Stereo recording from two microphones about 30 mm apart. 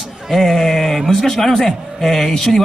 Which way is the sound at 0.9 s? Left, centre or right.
Centre.